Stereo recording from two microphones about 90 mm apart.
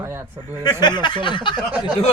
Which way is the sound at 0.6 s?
50° left (ahead or behind).